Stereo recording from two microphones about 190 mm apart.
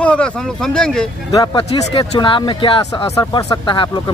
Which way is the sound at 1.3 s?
25° left (ahead or behind).